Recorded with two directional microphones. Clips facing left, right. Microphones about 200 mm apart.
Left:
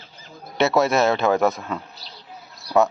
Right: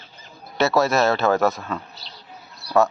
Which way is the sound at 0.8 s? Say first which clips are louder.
Even; 20° left (ahead or behind).